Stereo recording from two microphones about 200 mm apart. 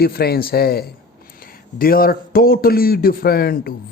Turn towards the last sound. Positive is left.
turn(degrees=50)  # may be behind; listen again after turning